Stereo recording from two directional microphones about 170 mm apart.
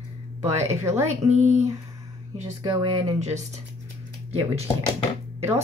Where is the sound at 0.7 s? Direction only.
40° right (ahead or behind).